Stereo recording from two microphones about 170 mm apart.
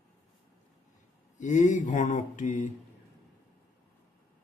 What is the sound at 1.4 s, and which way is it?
Speech, 45° left (ahead or behind).